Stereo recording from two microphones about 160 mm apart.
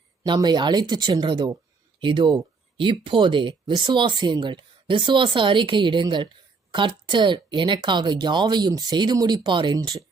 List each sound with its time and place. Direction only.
0.3 s speech: 25° right (ahead or behind)